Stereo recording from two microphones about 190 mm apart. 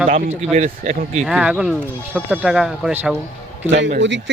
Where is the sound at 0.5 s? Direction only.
45° right (ahead or behind).